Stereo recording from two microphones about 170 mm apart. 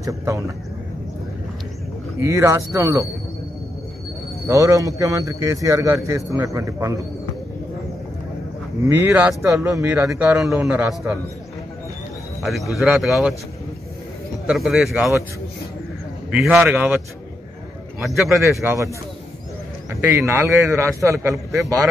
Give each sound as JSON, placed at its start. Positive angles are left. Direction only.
{"t": 0.0, "sound": "a man's voice", "side_deg": -20}
{"t": 2.2, "sound": "a man's voice", "side_deg": -20}
{"t": 4.5, "sound": "a man's voice", "side_deg": -20}
{"t": 9.1, "sound": "a man's voice", "side_deg": -10}
{"t": 10.0, "sound": "a man's voice", "side_deg": -5}
{"t": 12.4, "sound": "a man's voice", "side_deg": 0}
{"t": 14.5, "sound": "a man's voice", "side_deg": -5}
{"t": 16.3, "sound": "a man's voice", "side_deg": -5}
{"t": 18.0, "sound": "a man's voice", "side_deg": 0}
{"t": 18.6, "sound": "a man's voice", "side_deg": -15}
{"t": 19.9, "sound": "a man's voice", "side_deg": -15}